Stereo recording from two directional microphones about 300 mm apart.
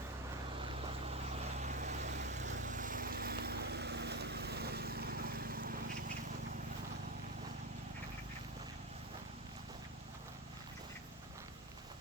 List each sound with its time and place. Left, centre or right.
1.1 s vehicle: right